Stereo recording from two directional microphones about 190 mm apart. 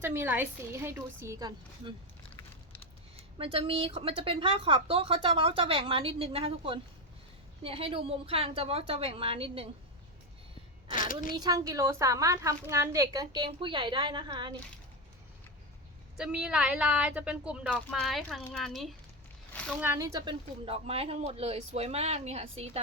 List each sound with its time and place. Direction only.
0.0 s a woman's voice: 10° right (ahead or behind)
3.3 s a woman's voice: 30° right (ahead or behind)
10.9 s a woman's voice: 45° left (ahead or behind)
11.3 s a woman's voice: 20° right (ahead or behind)
16.1 s a woman's voice: 5° right (ahead or behind)
19.8 s speech: 15° right (ahead or behind); by 22.8 s 30° right (ahead or behind)